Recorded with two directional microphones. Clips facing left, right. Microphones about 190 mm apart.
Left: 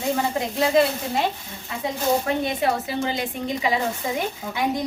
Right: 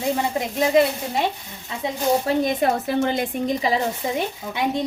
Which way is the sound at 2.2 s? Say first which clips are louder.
Right 3 dB; 45° right (ahead or behind).